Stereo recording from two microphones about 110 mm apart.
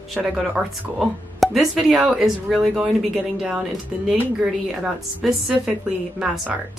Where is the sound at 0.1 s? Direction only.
5° right (ahead or behind).